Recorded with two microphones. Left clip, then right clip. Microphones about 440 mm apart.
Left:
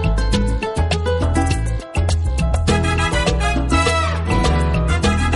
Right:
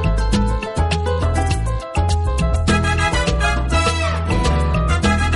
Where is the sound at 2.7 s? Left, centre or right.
Left.